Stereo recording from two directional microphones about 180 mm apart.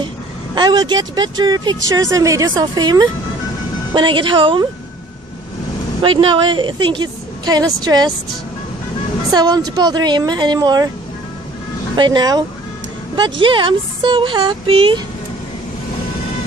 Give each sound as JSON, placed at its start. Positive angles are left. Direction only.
{"t": 0.6, "sound": "speech", "side_deg": -25}
{"t": 6.0, "sound": "speech", "side_deg": -30}
{"t": 9.3, "sound": "speech", "side_deg": -20}
{"t": 11.9, "sound": "speech", "side_deg": -25}